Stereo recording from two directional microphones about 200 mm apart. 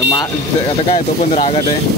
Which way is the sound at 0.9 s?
35° left (ahead or behind).